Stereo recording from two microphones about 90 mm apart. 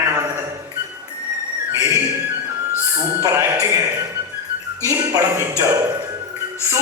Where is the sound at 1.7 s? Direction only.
30° right (ahead or behind).